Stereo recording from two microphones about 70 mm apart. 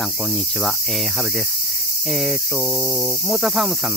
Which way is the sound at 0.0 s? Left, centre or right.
Centre.